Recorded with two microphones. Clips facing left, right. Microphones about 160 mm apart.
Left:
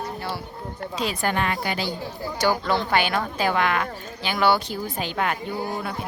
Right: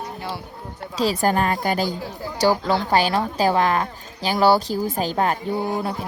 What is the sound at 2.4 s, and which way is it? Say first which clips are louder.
Speech: right 3 dB; 30° right (ahead or behind).